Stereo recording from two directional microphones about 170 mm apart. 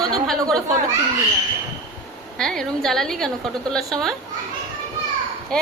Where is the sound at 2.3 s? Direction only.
5° left (ahead or behind).